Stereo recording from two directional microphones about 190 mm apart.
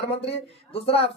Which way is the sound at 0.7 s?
30° left (ahead or behind).